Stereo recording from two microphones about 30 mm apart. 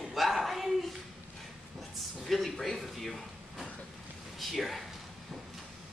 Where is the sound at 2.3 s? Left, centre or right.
Centre.